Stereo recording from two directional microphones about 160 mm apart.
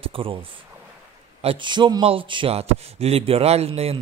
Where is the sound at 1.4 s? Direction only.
35° right (ahead or behind).